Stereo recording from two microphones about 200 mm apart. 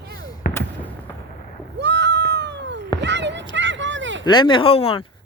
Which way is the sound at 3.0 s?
60° right (ahead or behind).